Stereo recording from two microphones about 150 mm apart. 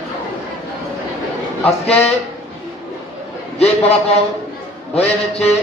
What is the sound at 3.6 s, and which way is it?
A man's voice, 45° left (ahead or behind).